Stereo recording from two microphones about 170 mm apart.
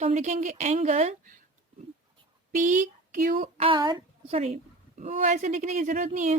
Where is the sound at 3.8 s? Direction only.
25° right (ahead or behind).